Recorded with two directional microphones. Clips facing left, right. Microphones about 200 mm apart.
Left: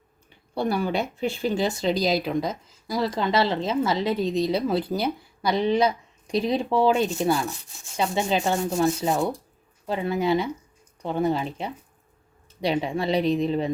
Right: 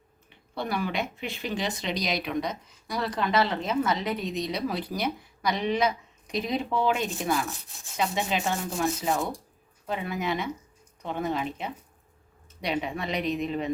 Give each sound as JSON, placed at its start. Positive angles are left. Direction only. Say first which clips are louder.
{"t": 0.6, "sound": "a woman's voice", "louder": "left 5 dB", "side_deg": 35}
{"t": 7.4, "sound": "rub", "louder": "left 5 dB", "side_deg": 0}
{"t": 7.9, "sound": "a woman's voice", "louder": "left 4 dB", "side_deg": 30}